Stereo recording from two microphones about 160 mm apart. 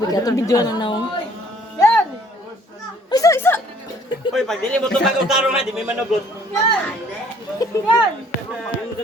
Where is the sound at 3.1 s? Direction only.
20° left (ahead or behind).